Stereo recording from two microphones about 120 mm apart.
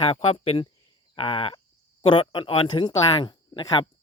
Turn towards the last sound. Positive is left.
turn(degrees=45)  # may be behind; listen again after turning